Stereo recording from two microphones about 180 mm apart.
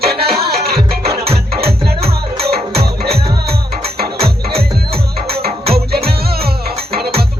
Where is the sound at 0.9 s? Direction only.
60° right (ahead or behind).